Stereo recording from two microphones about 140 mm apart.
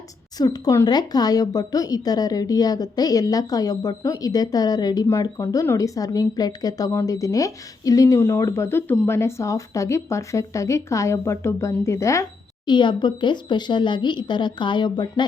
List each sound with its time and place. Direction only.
0.3 s speech: 30° left (ahead or behind)
12.6 s speech: 35° left (ahead or behind)